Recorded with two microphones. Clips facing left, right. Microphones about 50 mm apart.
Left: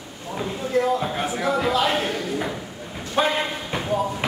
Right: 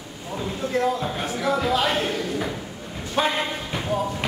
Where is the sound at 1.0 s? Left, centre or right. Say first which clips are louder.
Left 2 dB; centre.